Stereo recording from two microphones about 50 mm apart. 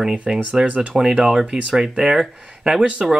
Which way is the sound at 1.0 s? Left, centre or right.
Centre.